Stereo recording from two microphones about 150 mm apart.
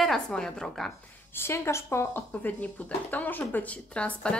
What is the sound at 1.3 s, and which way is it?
Speech, 15° left (ahead or behind).